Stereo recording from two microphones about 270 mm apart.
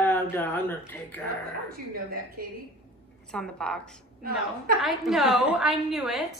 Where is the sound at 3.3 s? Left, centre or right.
Centre.